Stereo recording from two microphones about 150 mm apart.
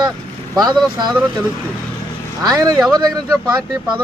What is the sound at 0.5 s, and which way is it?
Speech, 25° right (ahead or behind).